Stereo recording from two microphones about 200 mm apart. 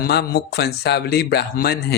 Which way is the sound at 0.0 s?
50° left (ahead or behind).